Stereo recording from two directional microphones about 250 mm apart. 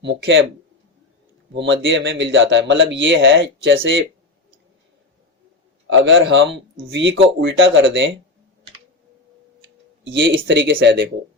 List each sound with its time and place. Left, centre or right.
0.0 s speech: right
1.5 s speech: right
5.9 s speech: right
10.0 s speech: right